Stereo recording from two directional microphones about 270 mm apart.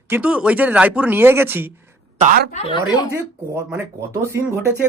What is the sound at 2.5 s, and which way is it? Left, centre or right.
Speech, left.